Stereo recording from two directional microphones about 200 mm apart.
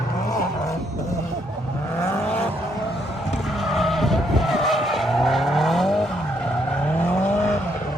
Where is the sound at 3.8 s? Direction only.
Centre (ahead or behind).